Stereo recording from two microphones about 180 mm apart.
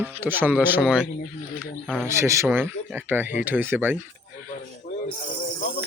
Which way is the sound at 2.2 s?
15° right (ahead or behind).